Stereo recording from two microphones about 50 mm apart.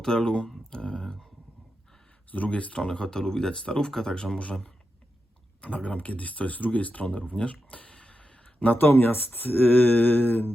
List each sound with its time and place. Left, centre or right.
0.0 s speech: centre
2.3 s speech: left
5.6 s speech: left
8.5 s speech: left